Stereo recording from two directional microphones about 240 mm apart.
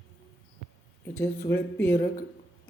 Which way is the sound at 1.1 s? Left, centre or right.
Centre.